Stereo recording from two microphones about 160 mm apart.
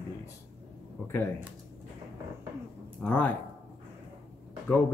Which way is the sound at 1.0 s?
15° left (ahead or behind).